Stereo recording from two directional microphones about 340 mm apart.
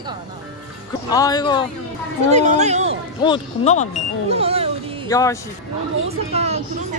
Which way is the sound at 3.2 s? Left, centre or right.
Centre.